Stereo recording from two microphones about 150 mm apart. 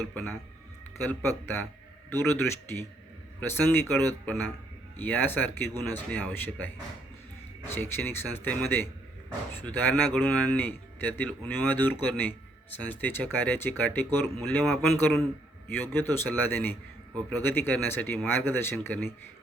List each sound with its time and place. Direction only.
0.1 s speech: 10° left (ahead or behind)
7.7 s speech: 15° left (ahead or behind)